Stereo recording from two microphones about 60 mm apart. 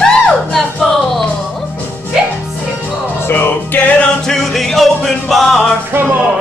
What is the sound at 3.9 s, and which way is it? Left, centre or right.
Music, centre.